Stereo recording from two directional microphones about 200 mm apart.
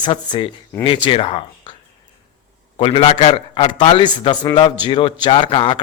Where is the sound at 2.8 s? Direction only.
30° left (ahead or behind).